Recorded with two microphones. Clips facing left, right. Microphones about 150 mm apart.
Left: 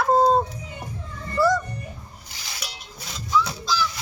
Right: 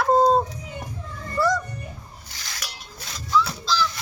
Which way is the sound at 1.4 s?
5° left (ahead or behind).